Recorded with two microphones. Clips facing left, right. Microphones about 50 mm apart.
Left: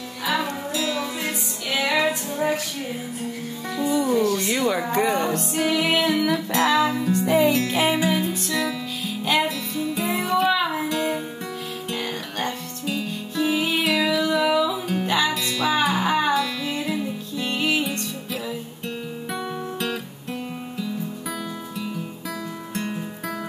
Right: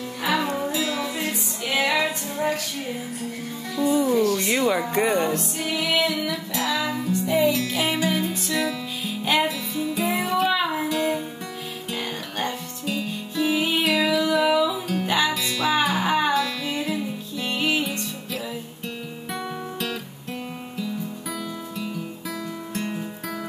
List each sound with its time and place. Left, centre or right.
0.7 s music: centre
2.0 s female singing: centre
4.2 s a sound: left
4.6 s speech: centre
5.0 s music: right
5.6 s music: left
7.9 s music: centre
8.2 s music: centre
22.8 s music: centre